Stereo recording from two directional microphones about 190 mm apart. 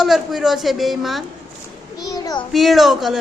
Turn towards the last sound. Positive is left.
turn(degrees=0)  # may be behind; listen again after turning